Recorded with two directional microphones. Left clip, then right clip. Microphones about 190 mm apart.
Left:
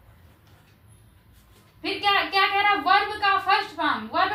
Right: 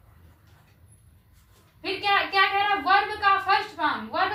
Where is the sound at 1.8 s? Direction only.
15° right (ahead or behind).